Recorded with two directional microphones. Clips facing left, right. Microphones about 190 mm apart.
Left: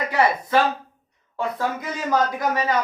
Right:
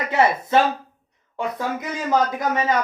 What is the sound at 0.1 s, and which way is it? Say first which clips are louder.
Speech: right 2 dB; 25° right (ahead or behind).